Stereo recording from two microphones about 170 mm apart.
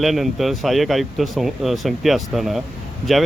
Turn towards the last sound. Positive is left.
turn(degrees=0)  # may be behind; listen again after turning